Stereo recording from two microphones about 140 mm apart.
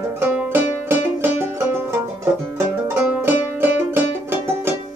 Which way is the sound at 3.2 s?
15° right (ahead or behind).